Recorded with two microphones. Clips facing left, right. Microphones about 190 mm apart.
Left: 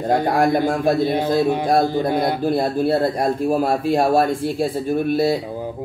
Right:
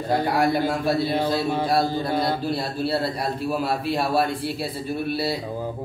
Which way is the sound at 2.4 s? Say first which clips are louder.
Left 7 dB; 50° left (ahead or behind).